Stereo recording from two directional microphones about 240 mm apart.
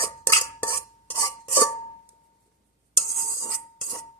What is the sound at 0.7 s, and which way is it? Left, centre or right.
Cutlery, left.